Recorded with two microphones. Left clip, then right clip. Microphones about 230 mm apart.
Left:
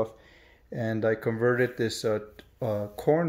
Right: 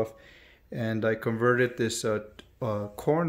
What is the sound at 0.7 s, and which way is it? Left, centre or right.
Speech, centre.